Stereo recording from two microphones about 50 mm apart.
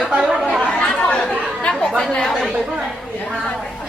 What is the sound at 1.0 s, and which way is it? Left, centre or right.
Chatter, centre.